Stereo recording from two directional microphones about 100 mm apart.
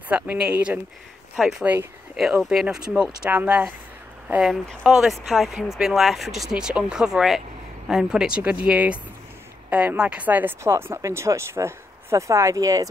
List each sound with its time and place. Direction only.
0.1 s speech: 10° right (ahead or behind); by 12.8 s 35° right (ahead or behind)